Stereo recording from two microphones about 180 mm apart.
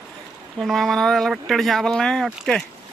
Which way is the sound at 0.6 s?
Centre (ahead or behind).